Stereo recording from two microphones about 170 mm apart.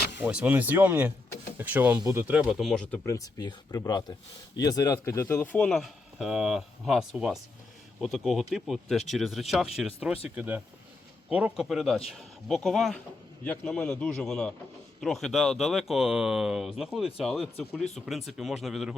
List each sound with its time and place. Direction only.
0.2 s speech: 10° right (ahead or behind)
2.2 s speech: 5° right (ahead or behind)